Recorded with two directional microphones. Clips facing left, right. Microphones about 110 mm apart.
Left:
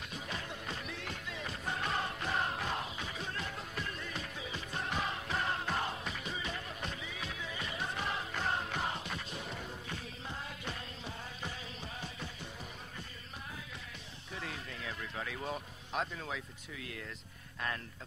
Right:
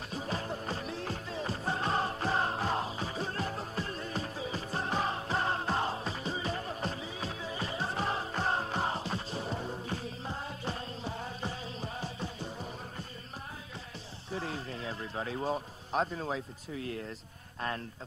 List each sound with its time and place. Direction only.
0.1 s music: 35° right (ahead or behind)
14.3 s a sound: 35° right (ahead or behind)
17.6 s speech: 35° right (ahead or behind)